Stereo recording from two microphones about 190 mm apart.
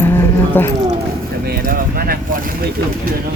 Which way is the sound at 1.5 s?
50° right (ahead or behind).